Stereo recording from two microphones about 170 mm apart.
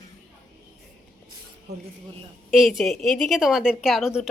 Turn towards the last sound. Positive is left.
turn(degrees=-5)  # may be behind; listen again after turning